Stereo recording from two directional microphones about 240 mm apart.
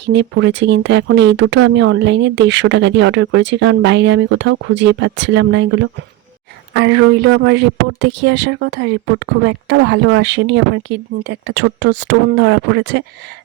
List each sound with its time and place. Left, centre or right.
0.0 s speech: right